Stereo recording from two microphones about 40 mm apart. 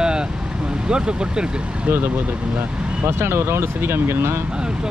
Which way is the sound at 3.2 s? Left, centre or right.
Right.